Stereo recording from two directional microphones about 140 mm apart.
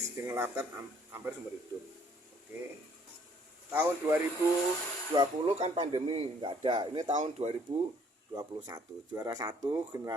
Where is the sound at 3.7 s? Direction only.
15° right (ahead or behind).